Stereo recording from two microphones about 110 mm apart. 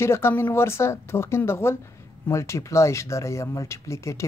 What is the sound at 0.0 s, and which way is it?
Speech, 20° left (ahead or behind).